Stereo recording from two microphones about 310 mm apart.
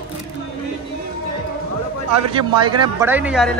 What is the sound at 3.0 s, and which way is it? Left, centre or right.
Speech, centre.